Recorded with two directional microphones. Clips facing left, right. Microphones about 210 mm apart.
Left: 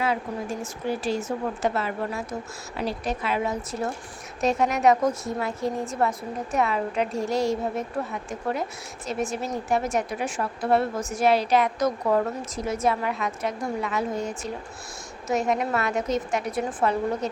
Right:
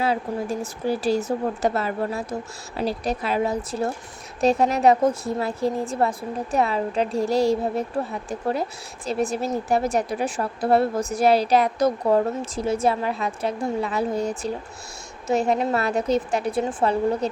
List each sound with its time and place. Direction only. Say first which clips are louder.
0.6 s a woman's voice: right 4 dB; 35° right (ahead or behind)